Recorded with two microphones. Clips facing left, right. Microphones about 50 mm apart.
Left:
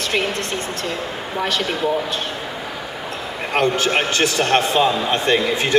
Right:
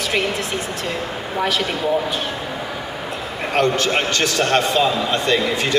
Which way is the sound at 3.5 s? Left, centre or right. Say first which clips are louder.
Even; centre.